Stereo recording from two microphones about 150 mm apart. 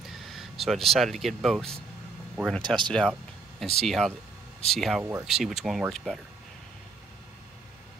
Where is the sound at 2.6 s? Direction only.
30° right (ahead or behind).